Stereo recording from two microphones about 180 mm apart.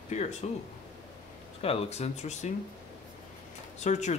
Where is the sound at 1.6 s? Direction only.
35° left (ahead or behind).